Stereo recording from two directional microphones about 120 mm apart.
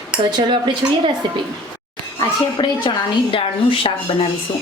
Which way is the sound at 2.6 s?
45° left (ahead or behind).